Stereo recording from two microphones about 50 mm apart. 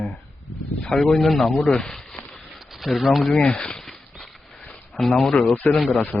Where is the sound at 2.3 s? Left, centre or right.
Centre.